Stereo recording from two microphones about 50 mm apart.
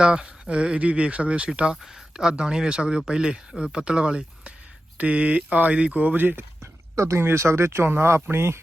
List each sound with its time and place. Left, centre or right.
0.0 s speech: centre; by 6.4 s right
6.6 s a sound: right
7.3 s speech: right